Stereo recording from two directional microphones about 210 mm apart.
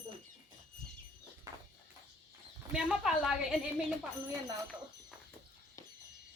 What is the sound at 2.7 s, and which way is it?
Speech, 5° right (ahead or behind).